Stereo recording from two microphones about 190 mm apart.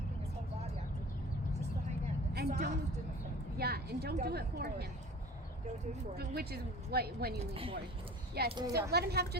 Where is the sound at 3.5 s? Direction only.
55° right (ahead or behind).